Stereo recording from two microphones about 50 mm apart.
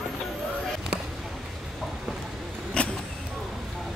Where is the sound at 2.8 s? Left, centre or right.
Left.